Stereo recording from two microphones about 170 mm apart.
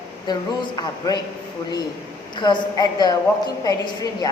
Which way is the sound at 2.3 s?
25° left (ahead or behind).